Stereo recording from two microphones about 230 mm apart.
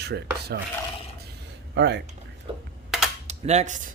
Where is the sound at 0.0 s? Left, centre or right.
Right.